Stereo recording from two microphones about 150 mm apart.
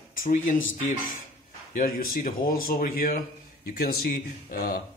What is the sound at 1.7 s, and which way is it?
Speech, 70° left (ahead or behind).